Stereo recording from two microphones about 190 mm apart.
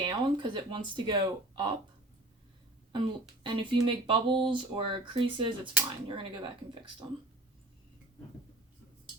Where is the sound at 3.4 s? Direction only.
25° right (ahead or behind).